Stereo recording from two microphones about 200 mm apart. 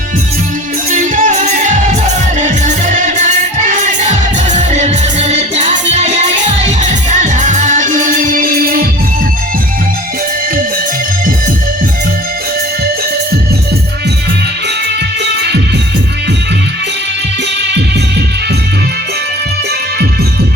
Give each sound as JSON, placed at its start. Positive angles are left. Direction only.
{"t": 0.9, "sound": "music", "side_deg": -40}